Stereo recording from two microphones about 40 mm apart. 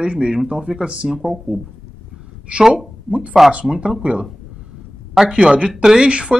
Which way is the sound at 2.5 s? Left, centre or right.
Right.